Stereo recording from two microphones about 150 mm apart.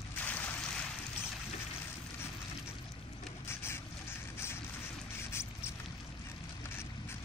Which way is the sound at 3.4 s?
15° left (ahead or behind).